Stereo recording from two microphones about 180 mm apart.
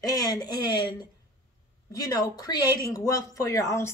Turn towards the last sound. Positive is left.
turn(degrees=15)  # may be behind; listen again after turning